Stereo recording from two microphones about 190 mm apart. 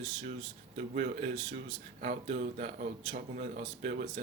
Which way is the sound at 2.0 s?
40° right (ahead or behind).